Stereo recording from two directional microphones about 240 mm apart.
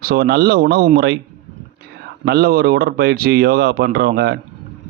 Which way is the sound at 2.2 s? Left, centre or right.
Right.